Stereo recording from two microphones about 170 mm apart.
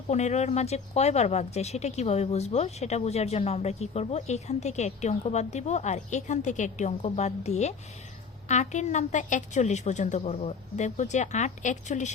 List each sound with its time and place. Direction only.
0.1 s a woman's voice: 40° left (ahead or behind)